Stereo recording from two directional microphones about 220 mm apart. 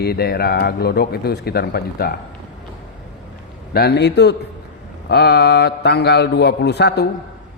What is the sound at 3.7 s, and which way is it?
Speech, 45° left (ahead or behind).